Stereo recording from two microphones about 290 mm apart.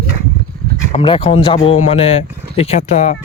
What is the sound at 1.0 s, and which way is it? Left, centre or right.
Speech, centre.